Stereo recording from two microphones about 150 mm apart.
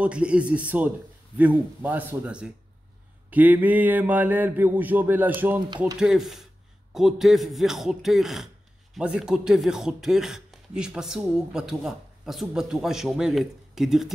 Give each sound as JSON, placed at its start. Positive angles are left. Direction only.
{"t": 0.0, "sound": "speech", "side_deg": -10}